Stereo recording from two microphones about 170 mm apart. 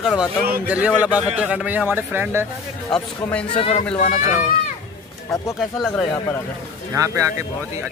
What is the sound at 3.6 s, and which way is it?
Speech, 35° left (ahead or behind).